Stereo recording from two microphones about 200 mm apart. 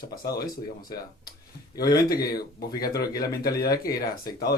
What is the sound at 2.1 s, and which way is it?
Speech, 50° left (ahead or behind).